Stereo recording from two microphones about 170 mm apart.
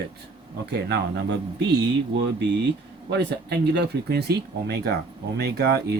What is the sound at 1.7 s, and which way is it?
Speech, 85° right.